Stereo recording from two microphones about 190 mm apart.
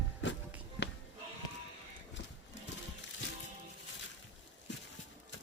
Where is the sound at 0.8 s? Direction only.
70° left (ahead or behind).